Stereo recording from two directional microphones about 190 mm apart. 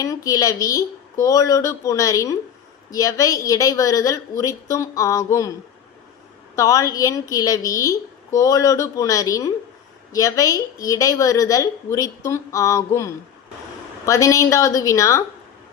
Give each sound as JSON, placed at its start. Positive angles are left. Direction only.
{"t": 0.0, "sound": "a woman's voice", "side_deg": 15}
{"t": 6.6, "sound": "a woman's voice", "side_deg": 15}